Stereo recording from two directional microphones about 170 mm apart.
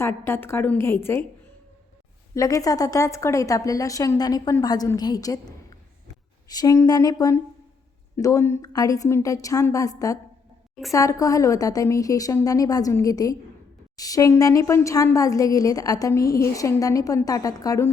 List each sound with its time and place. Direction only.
0.0 s a woman's voice: 15° left (ahead or behind)
2.3 s a woman's voice: 20° left (ahead or behind)
6.5 s a woman's voice: 20° left (ahead or behind)